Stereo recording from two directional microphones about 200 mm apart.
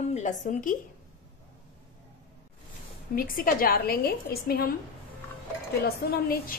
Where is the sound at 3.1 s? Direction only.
45° left (ahead or behind).